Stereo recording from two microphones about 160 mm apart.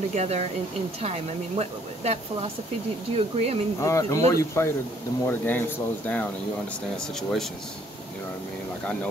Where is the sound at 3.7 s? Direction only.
20° left (ahead or behind); by 7.5 s centre (ahead or behind).